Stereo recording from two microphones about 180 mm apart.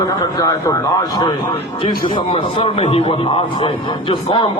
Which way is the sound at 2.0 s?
30° left (ahead or behind).